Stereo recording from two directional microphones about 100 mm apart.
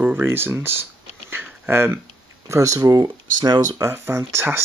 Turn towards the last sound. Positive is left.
turn(degrees=-25)  # may be behind; listen again after turning